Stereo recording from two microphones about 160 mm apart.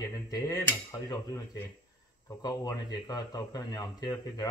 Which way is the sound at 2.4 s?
25° left (ahead or behind).